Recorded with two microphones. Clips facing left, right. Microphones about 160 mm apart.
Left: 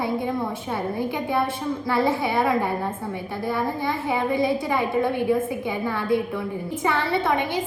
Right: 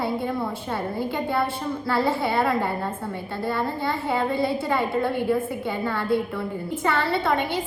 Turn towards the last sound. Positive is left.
turn(degrees=15)  # may be behind; listen again after turning